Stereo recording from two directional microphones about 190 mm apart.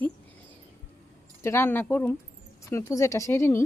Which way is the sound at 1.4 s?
15° left (ahead or behind).